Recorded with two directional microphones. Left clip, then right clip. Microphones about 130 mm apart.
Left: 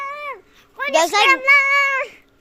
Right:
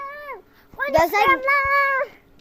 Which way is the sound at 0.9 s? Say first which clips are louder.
Left 2 dB; 10° left (ahead or behind).